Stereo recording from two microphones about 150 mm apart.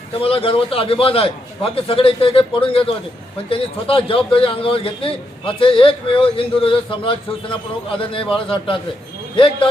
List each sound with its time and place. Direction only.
0.2 s a man's voice: 40° left (ahead or behind)